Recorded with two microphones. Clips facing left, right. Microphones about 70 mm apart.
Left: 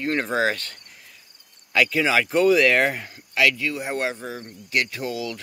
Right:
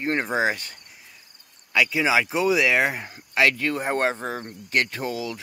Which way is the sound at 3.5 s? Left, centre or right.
Right.